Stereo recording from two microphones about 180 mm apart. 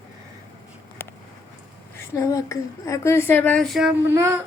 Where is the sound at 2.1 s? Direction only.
20° left (ahead or behind); by 3.9 s centre (ahead or behind).